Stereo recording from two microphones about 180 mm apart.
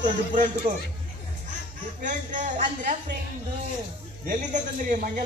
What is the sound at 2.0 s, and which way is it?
Speech, 45° right (ahead or behind).